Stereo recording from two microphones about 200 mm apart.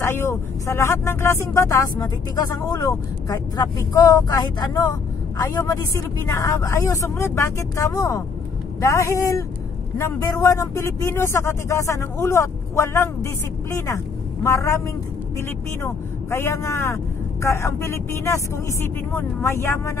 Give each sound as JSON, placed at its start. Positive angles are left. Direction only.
{"t": 0.0, "sound": "speech", "side_deg": 15}
{"t": 15.8, "sound": "speech", "side_deg": 15}